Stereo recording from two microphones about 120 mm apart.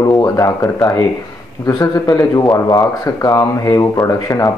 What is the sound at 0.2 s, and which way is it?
Speech, 25° left (ahead or behind).